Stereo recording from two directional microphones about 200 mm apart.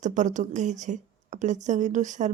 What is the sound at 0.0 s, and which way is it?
A woman's voice, 40° right (ahead or behind).